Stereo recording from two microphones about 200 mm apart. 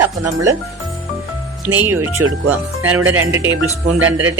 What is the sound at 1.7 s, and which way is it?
Speech, 10° right (ahead or behind).